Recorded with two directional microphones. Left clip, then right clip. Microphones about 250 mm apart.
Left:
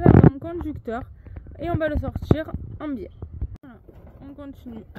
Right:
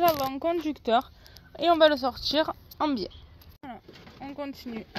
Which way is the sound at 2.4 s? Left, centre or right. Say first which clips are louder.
Right 5 dB; right.